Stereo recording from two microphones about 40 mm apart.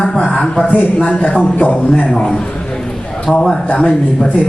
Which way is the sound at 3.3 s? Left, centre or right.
Left.